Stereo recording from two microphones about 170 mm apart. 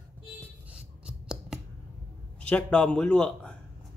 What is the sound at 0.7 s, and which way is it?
Scissors, 5° right (ahead or behind).